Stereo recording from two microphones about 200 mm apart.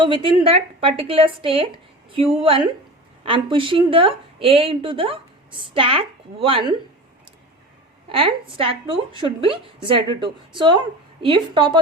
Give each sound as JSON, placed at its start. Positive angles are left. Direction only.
{"t": 0.0, "sound": "a woman's voice", "side_deg": -25}
{"t": 8.1, "sound": "a woman's voice", "side_deg": -25}